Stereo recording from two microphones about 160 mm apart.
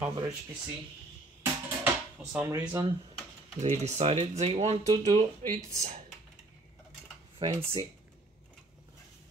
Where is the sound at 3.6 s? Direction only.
45° right (ahead or behind).